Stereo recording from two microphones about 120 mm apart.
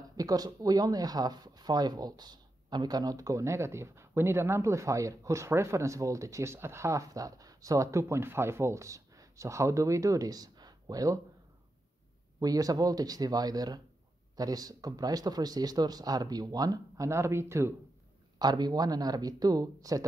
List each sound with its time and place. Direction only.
0.2 s speech: 30° right (ahead or behind)
12.4 s speech: 30° right (ahead or behind)
18.4 s speech: 35° right (ahead or behind)